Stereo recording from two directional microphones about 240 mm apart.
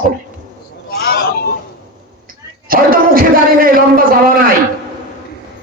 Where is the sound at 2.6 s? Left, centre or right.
Right.